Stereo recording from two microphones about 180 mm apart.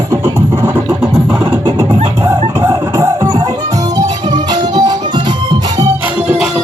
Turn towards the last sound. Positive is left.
turn(degrees=-5)  # may be behind; listen again after turning